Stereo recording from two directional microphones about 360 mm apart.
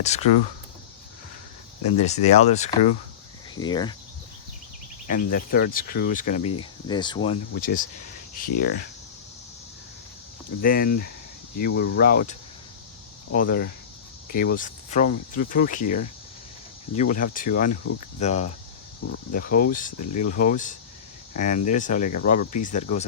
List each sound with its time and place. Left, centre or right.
0.0 s speech: centre
1.9 s speech: centre
5.0 s speech: left
7.5 s speech: left
10.6 s speech: left